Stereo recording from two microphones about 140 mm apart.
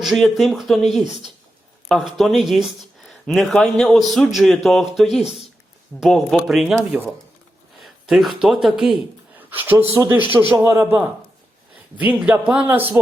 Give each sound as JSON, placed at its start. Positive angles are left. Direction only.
{"t": 0.0, "sound": "speech", "side_deg": 0}
{"t": 8.0, "sound": "speech", "side_deg": 0}
{"t": 9.4, "sound": "speech", "side_deg": -15}
{"t": 12.2, "sound": "speech", "side_deg": -10}